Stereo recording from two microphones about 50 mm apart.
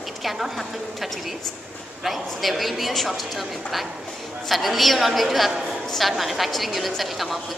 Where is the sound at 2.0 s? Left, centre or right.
Centre.